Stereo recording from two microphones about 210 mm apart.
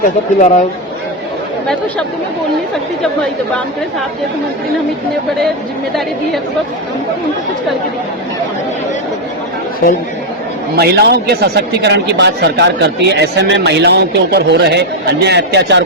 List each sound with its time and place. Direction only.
0.3 s speech: 35° left (ahead or behind)
10.8 s a man's voice: 50° right (ahead or behind)